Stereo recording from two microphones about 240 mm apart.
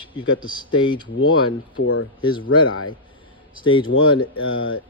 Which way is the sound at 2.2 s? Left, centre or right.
Centre.